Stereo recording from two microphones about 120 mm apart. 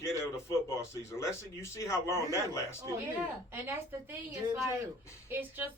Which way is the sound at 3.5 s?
20° right (ahead or behind).